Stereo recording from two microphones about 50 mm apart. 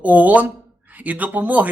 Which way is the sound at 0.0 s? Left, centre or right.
Right.